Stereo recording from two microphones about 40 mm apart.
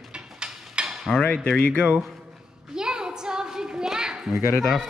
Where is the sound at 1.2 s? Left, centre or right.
Left.